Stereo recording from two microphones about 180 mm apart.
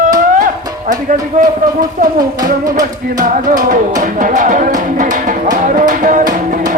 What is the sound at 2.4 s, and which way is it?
Music, 20° right (ahead or behind).